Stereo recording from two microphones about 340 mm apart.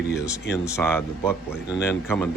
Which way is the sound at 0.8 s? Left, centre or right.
Centre.